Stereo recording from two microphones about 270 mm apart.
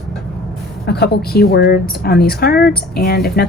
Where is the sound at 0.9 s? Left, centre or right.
Left.